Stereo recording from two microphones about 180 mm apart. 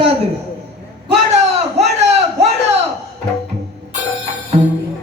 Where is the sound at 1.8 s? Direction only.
35° right (ahead or behind).